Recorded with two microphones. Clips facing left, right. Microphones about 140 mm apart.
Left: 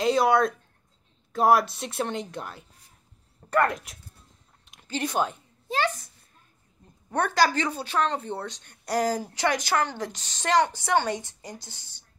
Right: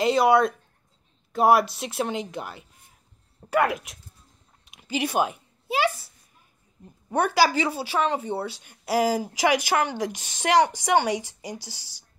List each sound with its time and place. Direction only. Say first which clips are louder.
0.0 s a woman's voice: right 2 dB; centre (ahead or behind)
4.6 s a sound: right 3 dB; 5° right (ahead or behind)
7.1 s speech: right 2 dB; 10° right (ahead or behind)
11.6 s a woman's voice: right 4 dB; 90° right